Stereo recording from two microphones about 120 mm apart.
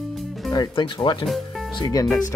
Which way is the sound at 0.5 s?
40° left (ahead or behind).